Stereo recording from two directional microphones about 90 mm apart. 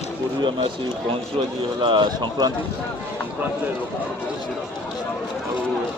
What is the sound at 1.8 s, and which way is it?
Speech, 60° right (ahead or behind).